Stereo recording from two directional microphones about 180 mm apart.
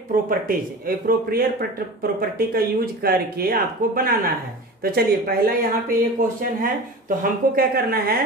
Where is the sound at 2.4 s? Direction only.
55° right (ahead or behind).